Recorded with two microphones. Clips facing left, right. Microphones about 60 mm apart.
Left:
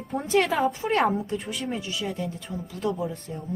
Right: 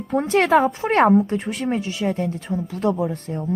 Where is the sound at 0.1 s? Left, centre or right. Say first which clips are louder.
Right 8 dB; right.